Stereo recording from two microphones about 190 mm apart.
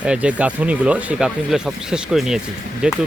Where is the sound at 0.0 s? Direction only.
5° right (ahead or behind).